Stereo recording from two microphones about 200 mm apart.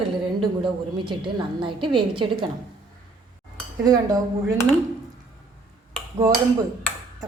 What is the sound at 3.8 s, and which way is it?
Speech, 20° right (ahead or behind).